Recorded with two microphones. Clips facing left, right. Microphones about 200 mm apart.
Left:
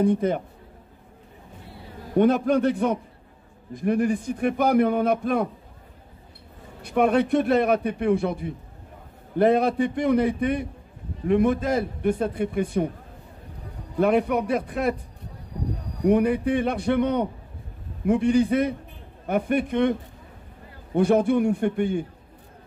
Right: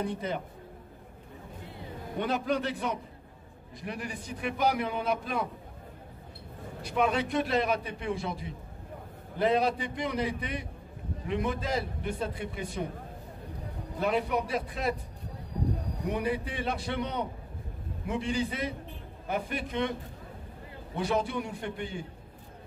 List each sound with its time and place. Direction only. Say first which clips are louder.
0.0 s a man's voice: left 11 dB; 50° left (ahead or behind)
2.1 s a man's voice: left 11 dB; 50° left (ahead or behind)
6.8 s a man's voice: left 8 dB; 55° left (ahead or behind)
13.9 s a man's voice: left 8 dB; 55° left (ahead or behind)
16.1 s a man's voice: left 12 dB; 55° left (ahead or behind)